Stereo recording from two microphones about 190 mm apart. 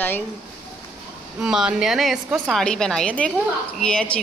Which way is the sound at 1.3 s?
5° right (ahead or behind).